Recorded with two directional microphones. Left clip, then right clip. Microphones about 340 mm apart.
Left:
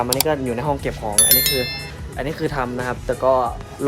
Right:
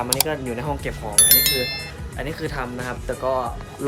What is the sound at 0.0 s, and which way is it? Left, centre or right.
Speech, centre.